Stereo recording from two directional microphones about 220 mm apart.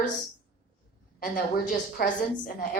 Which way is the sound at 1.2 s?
40° left (ahead or behind).